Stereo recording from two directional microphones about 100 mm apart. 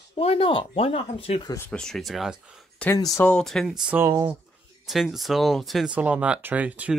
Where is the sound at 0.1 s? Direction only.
75° left (ahead or behind).